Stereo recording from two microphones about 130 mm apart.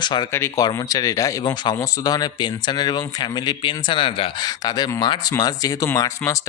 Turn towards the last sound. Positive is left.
turn(degrees=25)  # may be behind; listen again after turning